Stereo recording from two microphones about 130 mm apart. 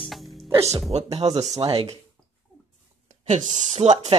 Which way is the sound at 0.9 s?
55° right (ahead or behind).